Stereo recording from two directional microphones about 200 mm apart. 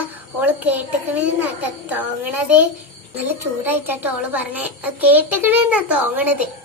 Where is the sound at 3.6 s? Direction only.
10° right (ahead or behind).